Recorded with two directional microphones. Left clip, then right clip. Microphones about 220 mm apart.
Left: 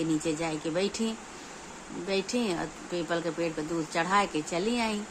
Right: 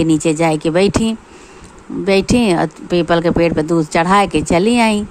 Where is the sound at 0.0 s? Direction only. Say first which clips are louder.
Right 16 dB; 40° right (ahead or behind).